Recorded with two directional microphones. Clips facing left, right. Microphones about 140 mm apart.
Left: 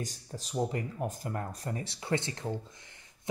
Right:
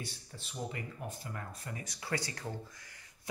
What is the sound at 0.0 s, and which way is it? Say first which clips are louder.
Speech: left 6 dB; 40° left (ahead or behind).